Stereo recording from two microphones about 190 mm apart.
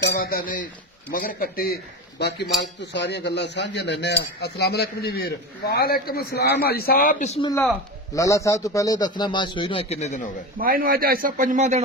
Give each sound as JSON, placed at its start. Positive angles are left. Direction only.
{"t": 0.1, "sound": "a man's voice", "side_deg": 55}
{"t": 8.1, "sound": "a man's voice", "side_deg": 15}
{"t": 10.6, "sound": "speech", "side_deg": -50}